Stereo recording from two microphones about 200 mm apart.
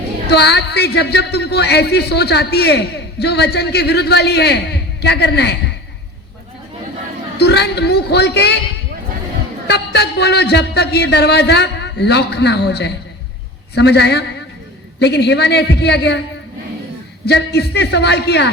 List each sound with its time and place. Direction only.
0.3 s a woman's voice: 55° left (ahead or behind)
7.3 s a woman's voice: 55° left (ahead or behind)
9.6 s a woman's voice: 55° left (ahead or behind)
17.2 s a woman's voice: 55° left (ahead or behind)